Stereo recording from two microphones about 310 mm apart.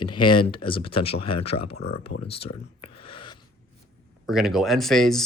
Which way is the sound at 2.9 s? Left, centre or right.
Centre.